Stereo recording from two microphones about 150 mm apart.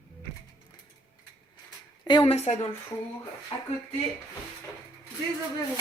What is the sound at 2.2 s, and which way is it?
Speech, 45° left (ahead or behind).